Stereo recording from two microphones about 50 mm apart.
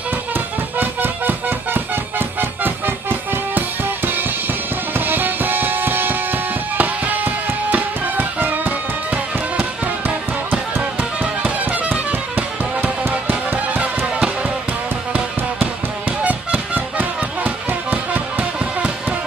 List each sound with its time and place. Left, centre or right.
0.3 s music: right
10.8 s music: right